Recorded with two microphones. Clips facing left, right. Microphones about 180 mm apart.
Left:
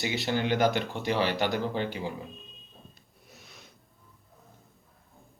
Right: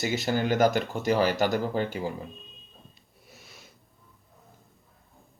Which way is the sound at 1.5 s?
Centre (ahead or behind).